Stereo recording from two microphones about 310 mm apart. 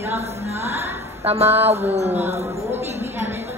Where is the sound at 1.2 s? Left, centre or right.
Centre.